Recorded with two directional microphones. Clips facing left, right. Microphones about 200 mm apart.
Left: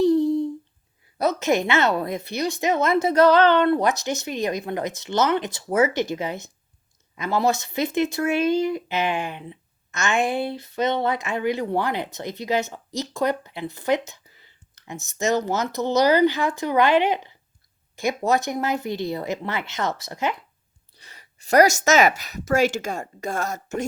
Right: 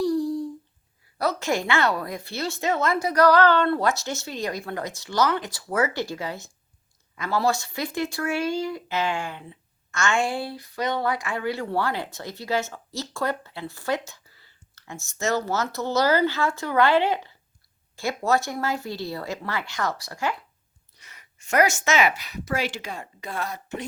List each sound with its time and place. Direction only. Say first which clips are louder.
0.0 s humming: left 5 dB; 25° left (ahead or behind)
1.2 s speech: left 4 dB; 20° left (ahead or behind)
20.9 s speech: left 3 dB; 30° left (ahead or behind)